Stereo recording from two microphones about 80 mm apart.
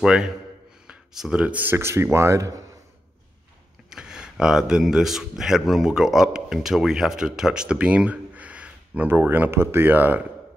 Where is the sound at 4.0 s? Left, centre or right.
Centre.